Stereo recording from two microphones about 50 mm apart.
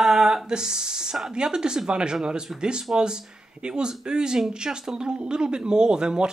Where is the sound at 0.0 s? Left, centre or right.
Centre.